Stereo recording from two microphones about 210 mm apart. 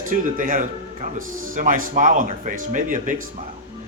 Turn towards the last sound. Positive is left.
turn(degrees=-40)  # may be behind; listen again after turning